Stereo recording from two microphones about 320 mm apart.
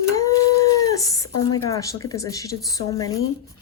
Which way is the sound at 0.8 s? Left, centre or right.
Centre.